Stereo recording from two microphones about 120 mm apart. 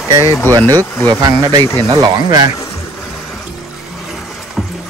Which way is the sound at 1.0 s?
30° right (ahead or behind).